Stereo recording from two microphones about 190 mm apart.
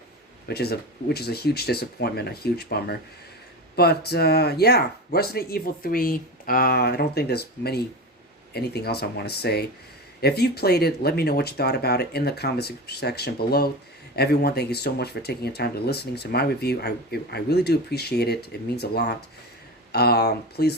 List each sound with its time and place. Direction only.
0.4 s speech: 55° left (ahead or behind)